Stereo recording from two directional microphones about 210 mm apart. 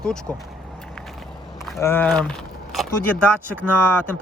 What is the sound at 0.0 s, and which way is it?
Speech, 5° left (ahead or behind).